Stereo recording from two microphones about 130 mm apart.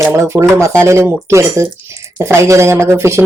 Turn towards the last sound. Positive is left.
turn(degrees=-20)  # may be behind; listen again after turning